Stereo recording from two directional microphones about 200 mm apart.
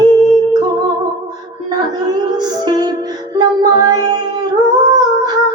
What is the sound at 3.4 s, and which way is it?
Music, 20° right (ahead or behind).